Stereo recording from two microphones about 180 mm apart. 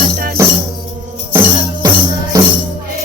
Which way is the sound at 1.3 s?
15° right (ahead or behind).